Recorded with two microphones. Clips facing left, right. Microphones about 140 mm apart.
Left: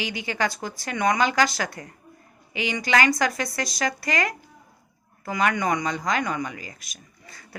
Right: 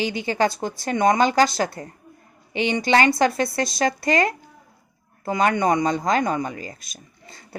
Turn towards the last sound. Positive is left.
turn(degrees=-25)  # may be behind; listen again after turning